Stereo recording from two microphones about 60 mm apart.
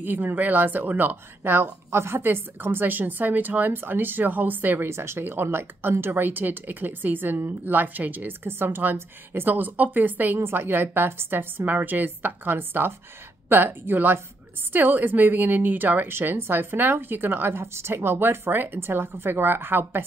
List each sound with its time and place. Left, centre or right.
0.0 s speech: right
4.8 s speech: right